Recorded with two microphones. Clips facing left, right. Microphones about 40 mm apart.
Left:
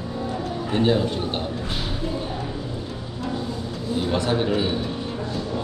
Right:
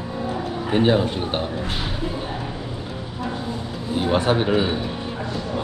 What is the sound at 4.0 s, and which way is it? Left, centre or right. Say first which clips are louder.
Speech: right 3 dB; right.